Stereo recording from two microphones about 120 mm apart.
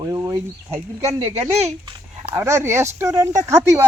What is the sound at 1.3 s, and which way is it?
Speech, 60° right (ahead or behind).